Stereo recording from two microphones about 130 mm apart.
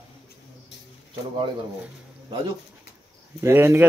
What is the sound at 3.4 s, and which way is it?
Speech, 20° right (ahead or behind).